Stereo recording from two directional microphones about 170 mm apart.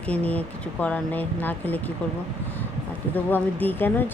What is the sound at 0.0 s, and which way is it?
Speech, 10° left (ahead or behind).